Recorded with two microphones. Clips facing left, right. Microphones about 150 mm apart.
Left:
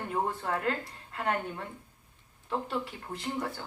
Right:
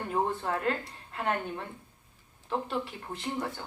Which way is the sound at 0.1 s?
30° right (ahead or behind).